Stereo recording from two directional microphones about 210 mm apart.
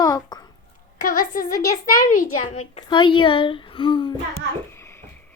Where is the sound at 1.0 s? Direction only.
45° left (ahead or behind).